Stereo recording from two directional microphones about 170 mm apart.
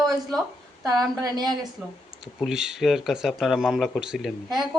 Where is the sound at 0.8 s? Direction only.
25° right (ahead or behind).